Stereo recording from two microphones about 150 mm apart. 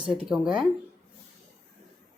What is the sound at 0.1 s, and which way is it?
Speech, 5° right (ahead or behind).